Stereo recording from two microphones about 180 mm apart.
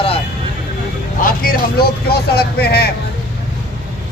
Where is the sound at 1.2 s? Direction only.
50° left (ahead or behind).